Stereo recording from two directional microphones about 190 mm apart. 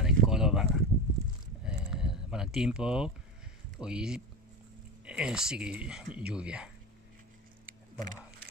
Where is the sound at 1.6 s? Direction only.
5° right (ahead or behind).